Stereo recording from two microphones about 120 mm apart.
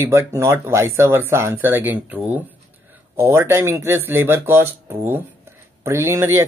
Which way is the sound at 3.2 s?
20° right (ahead or behind).